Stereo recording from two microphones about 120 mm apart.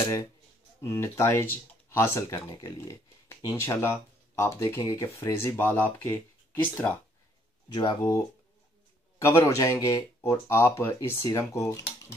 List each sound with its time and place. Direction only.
0.7 s speech: 20° left (ahead or behind)
7.7 s speech: 35° left (ahead or behind)
9.2 s speech: 25° left (ahead or behind)